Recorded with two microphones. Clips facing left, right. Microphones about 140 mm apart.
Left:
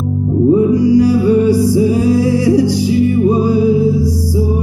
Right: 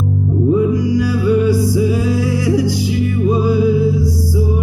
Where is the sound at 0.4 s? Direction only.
35° left (ahead or behind).